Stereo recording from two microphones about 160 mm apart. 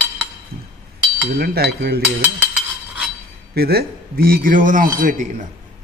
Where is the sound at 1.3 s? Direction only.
70° right (ahead or behind).